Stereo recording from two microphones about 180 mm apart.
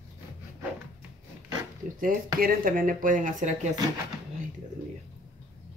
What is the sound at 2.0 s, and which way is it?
Speech, 50° right (ahead or behind).